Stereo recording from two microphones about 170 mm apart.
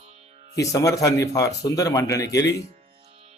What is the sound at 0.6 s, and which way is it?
Speech, 20° left (ahead or behind).